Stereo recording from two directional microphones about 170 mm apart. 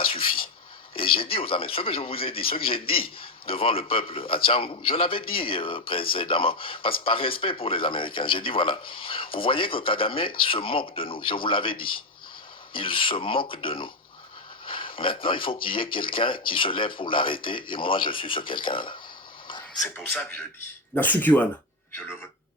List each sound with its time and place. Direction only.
0.0 s a sound: 35° left (ahead or behind)
0.9 s a man's voice: 30° left (ahead or behind)
12.7 s a man's voice: 30° left (ahead or behind)
20.9 s speech: 10° left (ahead or behind)